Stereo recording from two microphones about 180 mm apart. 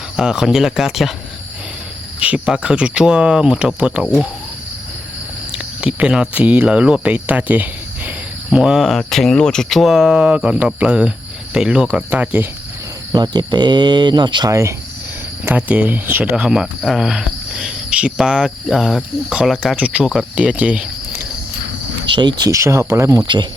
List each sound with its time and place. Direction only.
0.2 s speech: 5° right (ahead or behind)
2.1 s speech: 5° right (ahead or behind)
5.5 s speech: 5° right (ahead or behind)
13.1 s speech: 20° right (ahead or behind)
22.1 s speech: 25° right (ahead or behind)